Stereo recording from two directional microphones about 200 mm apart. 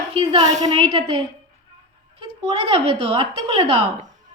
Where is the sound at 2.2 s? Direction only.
30° right (ahead or behind).